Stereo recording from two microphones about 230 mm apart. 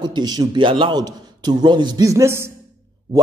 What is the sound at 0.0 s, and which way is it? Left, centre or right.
A man's voice, centre.